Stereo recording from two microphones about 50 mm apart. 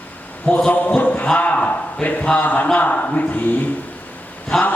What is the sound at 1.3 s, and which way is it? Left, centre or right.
A man's voice, left.